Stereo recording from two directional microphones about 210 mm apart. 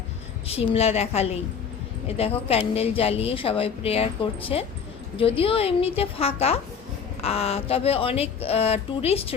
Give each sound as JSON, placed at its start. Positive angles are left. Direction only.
{"t": 0.4, "sound": "speech", "side_deg": 25}